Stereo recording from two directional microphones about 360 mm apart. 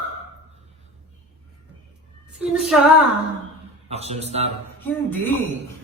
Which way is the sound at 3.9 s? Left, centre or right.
Centre.